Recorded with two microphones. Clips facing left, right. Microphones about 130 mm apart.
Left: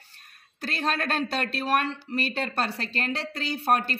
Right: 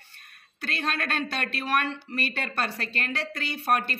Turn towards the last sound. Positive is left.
turn(degrees=35)  # may be behind; listen again after turning